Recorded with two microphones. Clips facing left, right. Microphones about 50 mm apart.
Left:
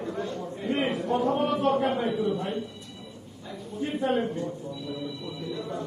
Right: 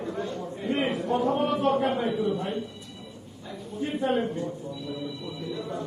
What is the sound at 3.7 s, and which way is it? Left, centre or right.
Speech, centre.